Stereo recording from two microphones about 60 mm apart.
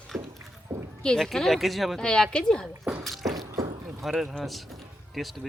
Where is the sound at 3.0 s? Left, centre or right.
Centre.